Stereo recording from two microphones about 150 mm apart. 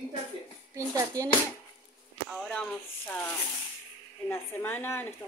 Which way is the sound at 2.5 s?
10° left (ahead or behind).